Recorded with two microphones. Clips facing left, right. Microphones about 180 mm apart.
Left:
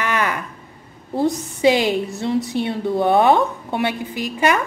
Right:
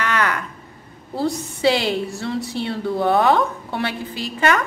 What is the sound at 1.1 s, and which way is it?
A woman's voice, 20° left (ahead or behind).